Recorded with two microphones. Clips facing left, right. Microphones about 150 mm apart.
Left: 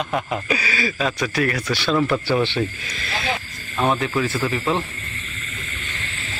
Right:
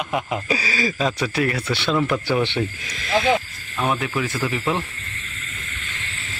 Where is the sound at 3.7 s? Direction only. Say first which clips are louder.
Left 2 dB; 25° left (ahead or behind).